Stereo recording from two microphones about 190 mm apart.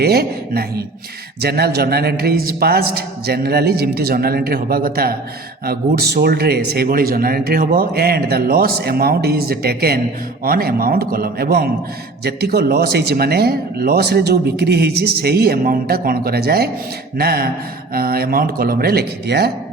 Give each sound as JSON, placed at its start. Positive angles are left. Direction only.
{"t": 0.0, "sound": "a man's voice", "side_deg": -55}